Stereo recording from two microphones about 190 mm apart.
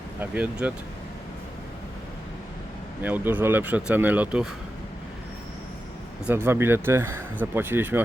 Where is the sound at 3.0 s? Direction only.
10° right (ahead or behind).